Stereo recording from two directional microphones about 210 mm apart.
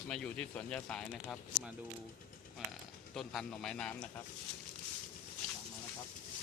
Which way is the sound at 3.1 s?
Centre (ahead or behind).